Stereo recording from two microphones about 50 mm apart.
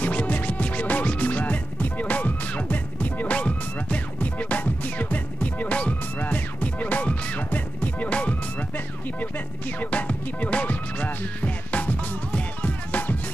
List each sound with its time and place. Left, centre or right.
0.0 s music: left